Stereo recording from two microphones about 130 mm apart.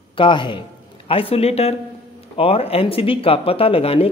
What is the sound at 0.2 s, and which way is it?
A man's voice, 40° left (ahead or behind).